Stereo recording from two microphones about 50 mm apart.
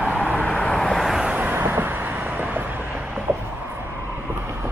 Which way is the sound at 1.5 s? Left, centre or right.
Right.